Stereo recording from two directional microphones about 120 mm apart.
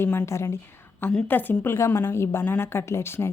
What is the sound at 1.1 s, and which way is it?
A woman's voice, 10° left (ahead or behind).